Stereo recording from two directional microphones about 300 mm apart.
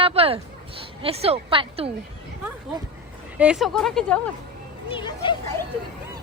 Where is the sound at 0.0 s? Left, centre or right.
Centre.